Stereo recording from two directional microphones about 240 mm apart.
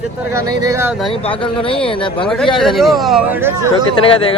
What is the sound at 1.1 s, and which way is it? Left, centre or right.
Speech, left.